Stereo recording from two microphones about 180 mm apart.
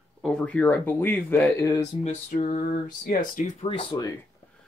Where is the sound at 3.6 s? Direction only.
30° left (ahead or behind).